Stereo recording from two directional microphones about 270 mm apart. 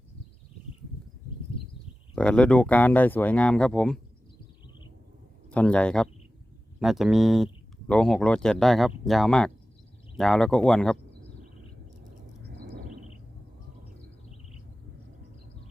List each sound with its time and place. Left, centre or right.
2.1 s speech: centre
5.5 s speech: centre
12.5 s a sound: right